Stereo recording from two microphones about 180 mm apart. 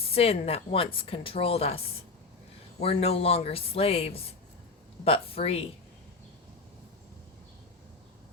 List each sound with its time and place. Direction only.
0.0 s a woman's voice: 35° left (ahead or behind)